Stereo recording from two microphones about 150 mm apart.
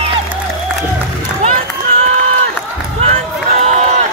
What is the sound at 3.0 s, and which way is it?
Run, 45° right (ahead or behind).